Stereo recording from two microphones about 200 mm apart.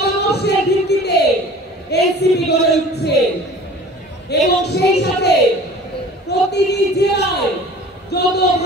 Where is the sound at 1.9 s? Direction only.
55° left (ahead or behind).